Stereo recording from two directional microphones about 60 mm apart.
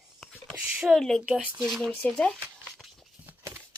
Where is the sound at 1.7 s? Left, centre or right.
Centre.